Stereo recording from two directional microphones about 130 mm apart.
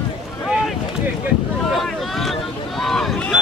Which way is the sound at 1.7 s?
Centre (ahead or behind).